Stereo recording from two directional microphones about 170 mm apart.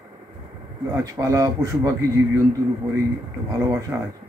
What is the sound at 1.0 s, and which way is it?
A man's voice, 20° right (ahead or behind).